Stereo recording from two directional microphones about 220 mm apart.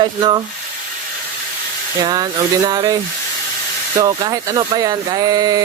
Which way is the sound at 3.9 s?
15° right (ahead or behind).